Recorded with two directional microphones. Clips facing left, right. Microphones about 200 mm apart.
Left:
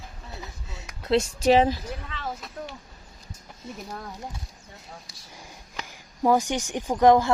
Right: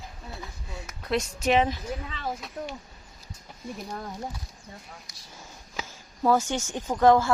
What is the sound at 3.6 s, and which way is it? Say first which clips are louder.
Speech: right 2 dB; 25° left (ahead or behind).